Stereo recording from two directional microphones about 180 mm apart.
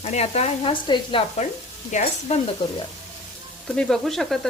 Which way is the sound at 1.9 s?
40° left (ahead or behind).